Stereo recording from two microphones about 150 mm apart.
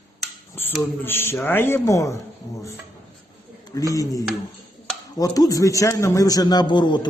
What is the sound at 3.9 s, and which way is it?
A man's voice, 25° left (ahead or behind).